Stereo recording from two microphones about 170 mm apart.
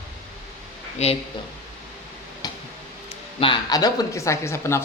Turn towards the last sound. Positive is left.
turn(degrees=15)  # may be behind; listen again after turning